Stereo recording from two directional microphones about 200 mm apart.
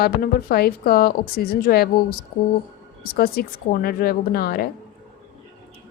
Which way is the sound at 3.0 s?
50° left (ahead or behind).